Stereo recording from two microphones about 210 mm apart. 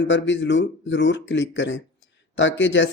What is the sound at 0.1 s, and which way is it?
Speech, 60° left (ahead or behind).